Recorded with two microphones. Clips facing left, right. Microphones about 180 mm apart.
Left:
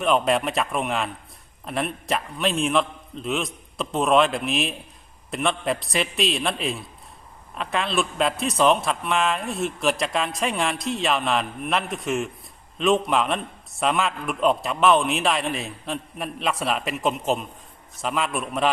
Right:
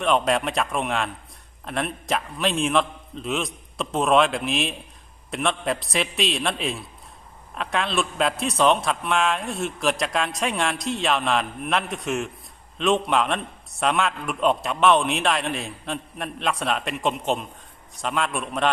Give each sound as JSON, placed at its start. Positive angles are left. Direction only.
{"t": 0.0, "sound": "a man's voice", "side_deg": 0}